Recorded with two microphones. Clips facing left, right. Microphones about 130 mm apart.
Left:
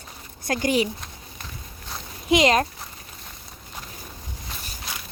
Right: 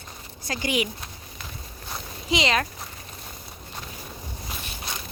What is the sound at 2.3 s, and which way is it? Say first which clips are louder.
Speech: left 5 dB; 45° left (ahead or behind).